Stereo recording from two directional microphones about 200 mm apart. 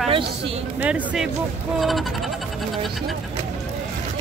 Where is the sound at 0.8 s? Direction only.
5° right (ahead or behind).